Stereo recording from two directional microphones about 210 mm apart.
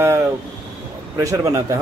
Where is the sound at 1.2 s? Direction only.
15° right (ahead or behind).